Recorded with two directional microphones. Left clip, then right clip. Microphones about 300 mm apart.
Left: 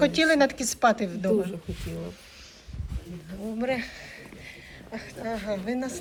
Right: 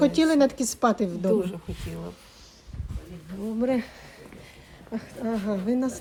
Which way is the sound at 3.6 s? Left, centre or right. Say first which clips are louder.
Right 2 dB; centre.